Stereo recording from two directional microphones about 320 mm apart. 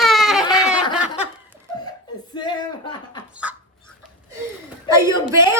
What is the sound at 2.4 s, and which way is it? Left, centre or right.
Speech, centre.